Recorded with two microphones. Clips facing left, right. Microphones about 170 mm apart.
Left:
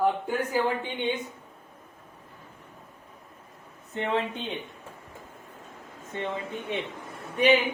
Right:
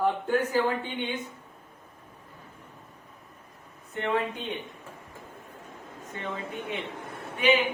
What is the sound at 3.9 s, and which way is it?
Speech, 25° left (ahead or behind).